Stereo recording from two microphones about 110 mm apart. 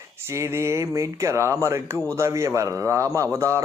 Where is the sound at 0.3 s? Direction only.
25° right (ahead or behind).